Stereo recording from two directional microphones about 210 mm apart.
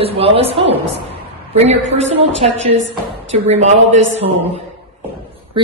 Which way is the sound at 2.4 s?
30° right (ahead or behind).